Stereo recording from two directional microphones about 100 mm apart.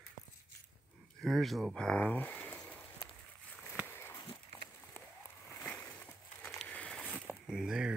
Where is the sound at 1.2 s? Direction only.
Centre (ahead or behind); by 2.6 s 15° left (ahead or behind).